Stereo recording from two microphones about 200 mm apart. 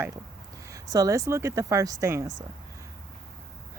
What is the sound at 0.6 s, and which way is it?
Speech, 15° right (ahead or behind).